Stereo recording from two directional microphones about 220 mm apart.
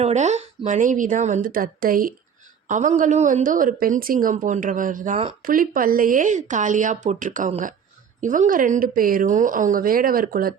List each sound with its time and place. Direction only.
0.0 s a woman's voice: 30° right (ahead or behind)